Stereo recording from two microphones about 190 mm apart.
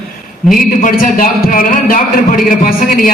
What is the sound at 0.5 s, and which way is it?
A man's voice, 45° left (ahead or behind).